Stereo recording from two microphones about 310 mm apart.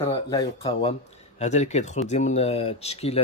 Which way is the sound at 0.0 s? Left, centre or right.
Centre.